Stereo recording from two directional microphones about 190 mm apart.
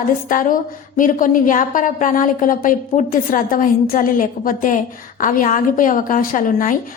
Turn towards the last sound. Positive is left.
turn(degrees=45)  # may be behind; listen again after turning